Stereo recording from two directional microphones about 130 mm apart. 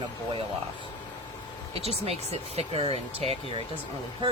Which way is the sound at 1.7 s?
50° right (ahead or behind).